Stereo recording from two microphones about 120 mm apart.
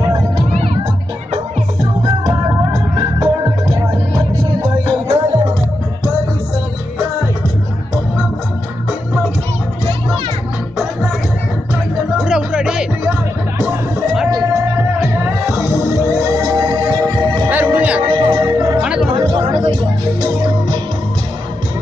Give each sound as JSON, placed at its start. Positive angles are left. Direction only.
{"t": 2.2, "sound": "music", "side_deg": -30}
{"t": 12.2, "sound": "music", "side_deg": -5}
{"t": 14.3, "sound": "music", "side_deg": -25}
{"t": 17.5, "sound": "music", "side_deg": -15}
{"t": 18.0, "sound": "music", "side_deg": -40}
{"t": 18.4, "sound": "music", "side_deg": -30}
{"t": 18.8, "sound": "music", "side_deg": -10}
{"t": 19.1, "sound": "music", "side_deg": -50}